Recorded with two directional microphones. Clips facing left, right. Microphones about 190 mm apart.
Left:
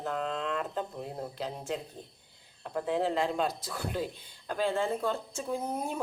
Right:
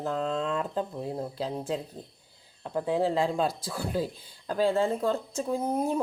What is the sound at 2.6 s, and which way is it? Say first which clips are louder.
Speech: right 3 dB; 30° right (ahead or behind).